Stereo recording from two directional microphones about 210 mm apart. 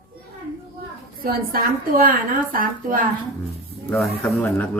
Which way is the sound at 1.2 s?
45° right (ahead or behind).